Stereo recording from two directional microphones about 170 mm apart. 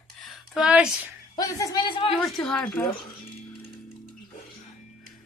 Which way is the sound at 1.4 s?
20° left (ahead or behind).